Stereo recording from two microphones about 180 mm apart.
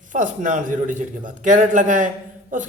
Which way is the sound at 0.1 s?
45° right (ahead or behind).